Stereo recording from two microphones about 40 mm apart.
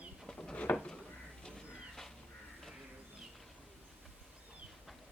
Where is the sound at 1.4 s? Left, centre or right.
Centre.